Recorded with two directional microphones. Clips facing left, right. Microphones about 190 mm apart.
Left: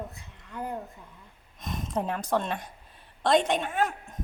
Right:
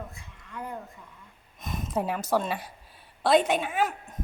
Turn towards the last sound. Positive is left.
turn(degrees=-5)  # may be behind; listen again after turning